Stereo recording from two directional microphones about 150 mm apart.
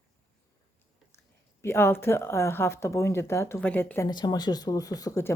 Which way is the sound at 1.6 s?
15° left (ahead or behind).